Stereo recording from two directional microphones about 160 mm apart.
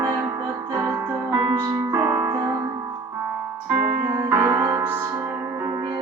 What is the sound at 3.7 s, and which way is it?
Music, 15° right (ahead or behind).